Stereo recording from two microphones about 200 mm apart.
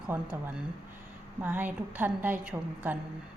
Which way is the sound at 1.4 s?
10° right (ahead or behind).